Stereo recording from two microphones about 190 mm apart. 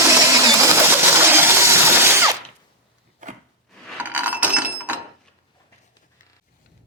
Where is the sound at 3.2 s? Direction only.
40° right (ahead or behind).